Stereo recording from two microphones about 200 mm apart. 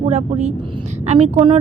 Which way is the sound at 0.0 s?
35° right (ahead or behind).